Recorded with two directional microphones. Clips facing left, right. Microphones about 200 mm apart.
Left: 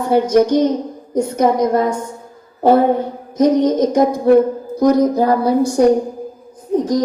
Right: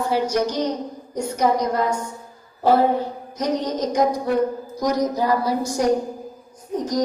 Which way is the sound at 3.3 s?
50° left (ahead or behind).